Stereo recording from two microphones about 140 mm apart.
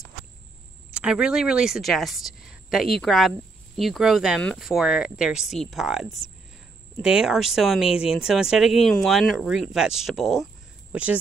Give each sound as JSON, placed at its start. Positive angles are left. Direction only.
{"t": 0.9, "sound": "a woman's voice", "side_deg": -5}